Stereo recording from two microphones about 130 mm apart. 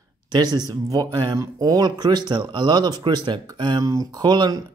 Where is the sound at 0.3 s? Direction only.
30° right (ahead or behind).